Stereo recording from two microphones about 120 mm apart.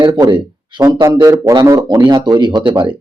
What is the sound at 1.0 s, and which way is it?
Speech, 30° right (ahead or behind).